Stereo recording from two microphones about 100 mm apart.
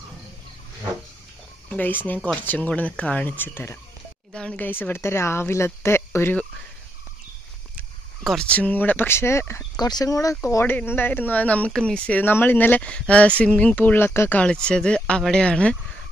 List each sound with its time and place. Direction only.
1.7 s speech: 20° left (ahead or behind)
4.3 s speech: 10° left (ahead or behind)
8.2 s speech: centre (ahead or behind)
8.5 s speech: 15° left (ahead or behind)
9.8 s speech: 40° left (ahead or behind)
10.6 s speech: 20° left (ahead or behind)
14.4 s speech: 10° left (ahead or behind)